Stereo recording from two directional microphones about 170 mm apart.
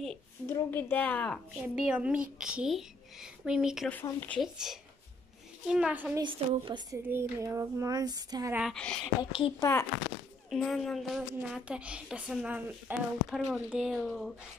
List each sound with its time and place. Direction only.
0.5 s a woman's voice: 10° left (ahead or behind)
1.8 s a woman's voice: 5° right (ahead or behind)
3.9 s a woman's voice: 10° left (ahead or behind)
4.4 s a woman's voice: centre (ahead or behind)
6.2 s a sound: 25° right (ahead or behind)
7.1 s a sound: 15° right (ahead or behind)
8.5 s a woman's voice: centre (ahead or behind)
9.2 s a woman's voice: 25° left (ahead or behind)
10.5 s a woman's voice: centre (ahead or behind)